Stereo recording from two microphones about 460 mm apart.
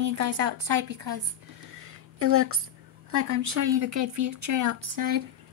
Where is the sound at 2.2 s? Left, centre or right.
Right.